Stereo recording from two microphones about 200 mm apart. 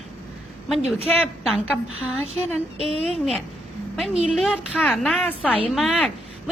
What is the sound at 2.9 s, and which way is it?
Speech, 30° right (ahead or behind).